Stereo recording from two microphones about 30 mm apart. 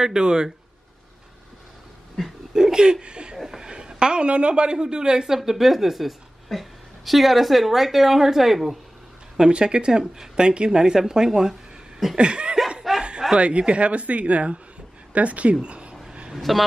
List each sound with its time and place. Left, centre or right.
0.0 s speech: right
2.2 s speech: centre
2.5 s speech: right
3.4 s a sound: right
4.3 s speech: right
4.7 s a woman's voice: right; by 8.6 s centre
9.5 s speech: right
12.2 s speech: right
12.9 s snicker: centre
13.4 s speech: right
15.1 s speech: right
15.6 s a sound: right
16.3 s a woman's voice: centre